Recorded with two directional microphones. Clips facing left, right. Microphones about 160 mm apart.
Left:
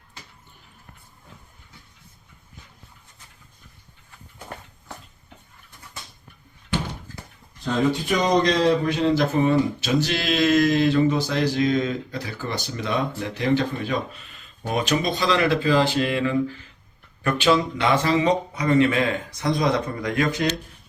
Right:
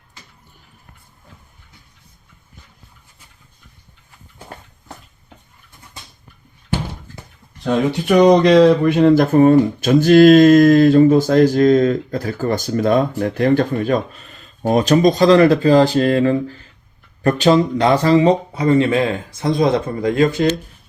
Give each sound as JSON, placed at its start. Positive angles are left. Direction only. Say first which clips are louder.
{"t": 7.6, "sound": "speech", "louder": "right 4 dB", "side_deg": -70}